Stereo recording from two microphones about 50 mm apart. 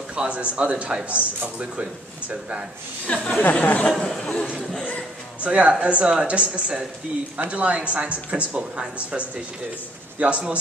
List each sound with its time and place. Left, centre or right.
0.1 s speech: right
3.1 s speech: left
5.4 s speech: right